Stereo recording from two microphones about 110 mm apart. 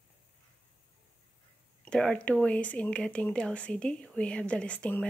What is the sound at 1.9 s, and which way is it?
Speech, 10° left (ahead or behind).